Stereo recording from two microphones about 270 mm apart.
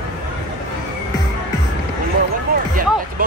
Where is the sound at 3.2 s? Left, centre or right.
Right.